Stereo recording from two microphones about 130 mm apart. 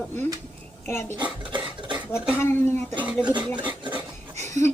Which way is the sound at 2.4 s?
15° left (ahead or behind).